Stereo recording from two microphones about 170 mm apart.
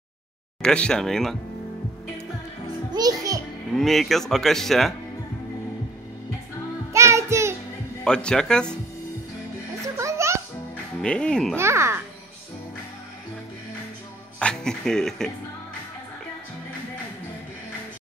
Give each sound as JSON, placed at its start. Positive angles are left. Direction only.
{"t": 0.6, "sound": "speech", "side_deg": 5}
{"t": 2.9, "sound": "a child's voice", "side_deg": -20}
{"t": 3.7, "sound": "speech", "side_deg": 0}
{"t": 6.9, "sound": "music", "side_deg": -15}
{"t": 8.0, "sound": "speech", "side_deg": 5}
{"t": 9.9, "sound": "music", "side_deg": -15}
{"t": 11.0, "sound": "speech", "side_deg": 5}
{"t": 11.5, "sound": "a child's voice", "side_deg": -15}
{"t": 14.4, "sound": "speech", "side_deg": 5}